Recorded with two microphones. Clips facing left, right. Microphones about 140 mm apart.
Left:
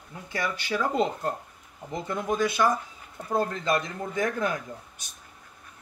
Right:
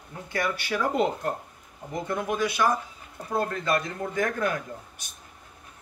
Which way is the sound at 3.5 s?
20° left (ahead or behind).